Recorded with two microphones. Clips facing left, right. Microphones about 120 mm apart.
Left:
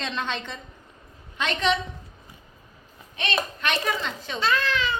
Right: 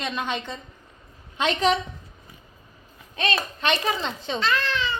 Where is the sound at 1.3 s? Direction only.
35° right (ahead or behind).